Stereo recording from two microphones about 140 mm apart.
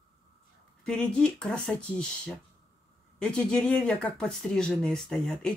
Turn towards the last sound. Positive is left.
turn(degrees=5)  # may be behind; listen again after turning